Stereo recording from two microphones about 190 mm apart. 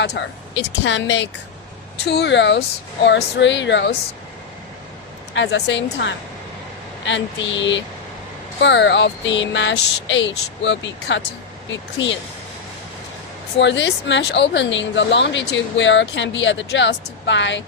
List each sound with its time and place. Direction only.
0.0 s speech: 70° left (ahead or behind)
5.3 s speech: 70° left (ahead or behind)
13.6 s speech: 70° left (ahead or behind)